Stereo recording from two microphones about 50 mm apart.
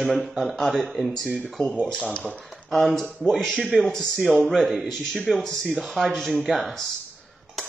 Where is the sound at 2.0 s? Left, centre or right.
Left.